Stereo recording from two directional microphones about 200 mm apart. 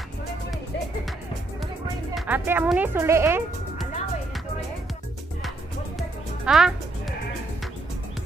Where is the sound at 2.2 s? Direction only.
10° right (ahead or behind).